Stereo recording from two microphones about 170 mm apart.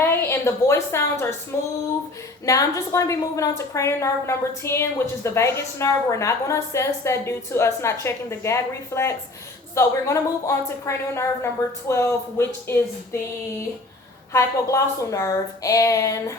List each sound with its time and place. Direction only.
0.0 s a woman's voice: 15° left (ahead or behind)
14.3 s a woman's voice: 20° left (ahead or behind)